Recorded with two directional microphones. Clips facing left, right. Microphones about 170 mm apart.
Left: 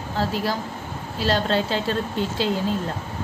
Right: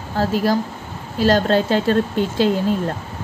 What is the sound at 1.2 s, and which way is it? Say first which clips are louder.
A woman's voice: right 6 dB; 45° right (ahead or behind).